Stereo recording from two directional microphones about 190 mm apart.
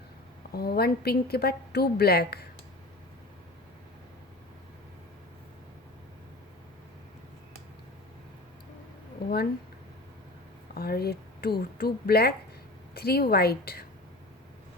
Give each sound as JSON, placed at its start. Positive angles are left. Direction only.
{"t": 0.5, "sound": "a woman's voice", "side_deg": 55}
{"t": 10.8, "sound": "a woman's voice", "side_deg": 55}